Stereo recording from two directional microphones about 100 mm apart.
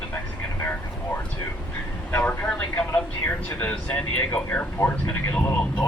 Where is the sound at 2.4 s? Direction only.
15° left (ahead or behind).